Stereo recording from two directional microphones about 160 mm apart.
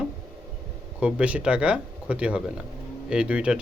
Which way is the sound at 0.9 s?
5° right (ahead or behind).